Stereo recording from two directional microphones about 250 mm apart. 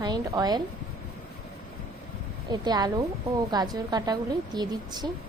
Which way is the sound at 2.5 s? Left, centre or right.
Centre.